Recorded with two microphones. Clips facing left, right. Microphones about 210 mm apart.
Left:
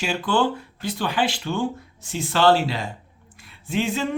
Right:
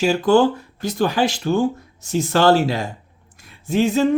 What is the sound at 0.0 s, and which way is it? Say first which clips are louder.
Speech: right 7 dB; 40° right (ahead or behind).